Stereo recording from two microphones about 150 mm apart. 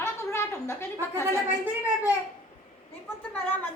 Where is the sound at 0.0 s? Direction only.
15° left (ahead or behind).